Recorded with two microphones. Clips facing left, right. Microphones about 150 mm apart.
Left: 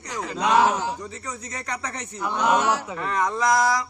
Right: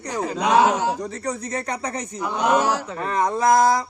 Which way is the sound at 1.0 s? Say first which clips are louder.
Right 7 dB; 35° right (ahead or behind).